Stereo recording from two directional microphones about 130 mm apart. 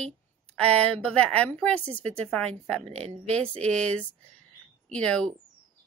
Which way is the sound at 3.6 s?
10° left (ahead or behind).